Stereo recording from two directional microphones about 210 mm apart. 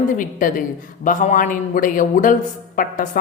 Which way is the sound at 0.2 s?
40° left (ahead or behind).